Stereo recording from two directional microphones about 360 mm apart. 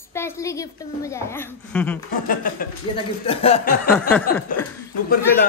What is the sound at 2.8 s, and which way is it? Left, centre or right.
Chuckle, centre.